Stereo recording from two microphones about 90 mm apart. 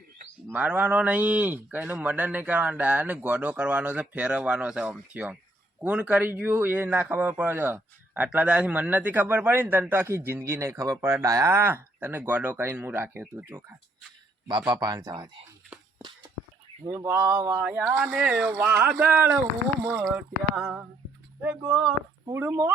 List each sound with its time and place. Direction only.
0.5 s a man's voice: 15° right (ahead or behind)
14.7 s speech: 45° right (ahead or behind)
16.0 s a sound: 55° right (ahead or behind)
16.8 s a man's voice: 30° right (ahead or behind); by 20.8 s 15° right (ahead or behind)
22.3 s a man's voice: 30° right (ahead or behind)